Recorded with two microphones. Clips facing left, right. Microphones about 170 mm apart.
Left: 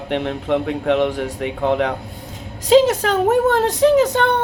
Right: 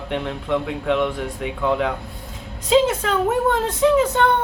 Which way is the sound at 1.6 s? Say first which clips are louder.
Left 2 dB; 65° left (ahead or behind).